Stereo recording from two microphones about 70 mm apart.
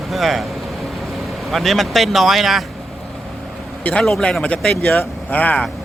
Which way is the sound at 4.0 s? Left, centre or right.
Centre.